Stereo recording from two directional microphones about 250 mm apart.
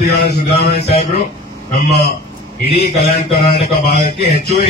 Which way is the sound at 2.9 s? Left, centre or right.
Left.